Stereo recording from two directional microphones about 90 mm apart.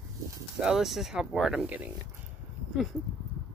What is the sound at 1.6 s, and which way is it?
Speech, 20° right (ahead or behind).